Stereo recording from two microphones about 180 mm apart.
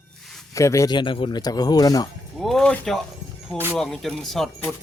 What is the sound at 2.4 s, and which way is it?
Speech, centre (ahead or behind).